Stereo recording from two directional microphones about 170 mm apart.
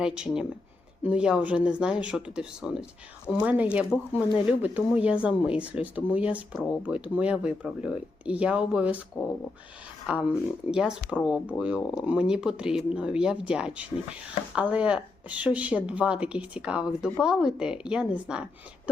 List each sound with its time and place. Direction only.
0.0 s speech: 5° right (ahead or behind)
10.1 s speech: 5° right (ahead or behind)